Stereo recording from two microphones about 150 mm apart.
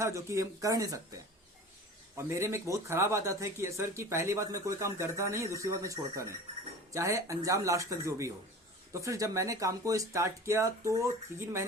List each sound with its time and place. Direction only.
0.0 s speech: 20° right (ahead or behind)
2.1 s speech: 20° right (ahead or behind)